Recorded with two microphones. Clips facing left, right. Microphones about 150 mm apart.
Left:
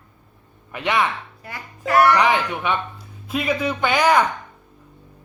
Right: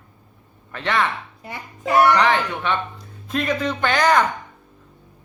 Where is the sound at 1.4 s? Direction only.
20° right (ahead or behind).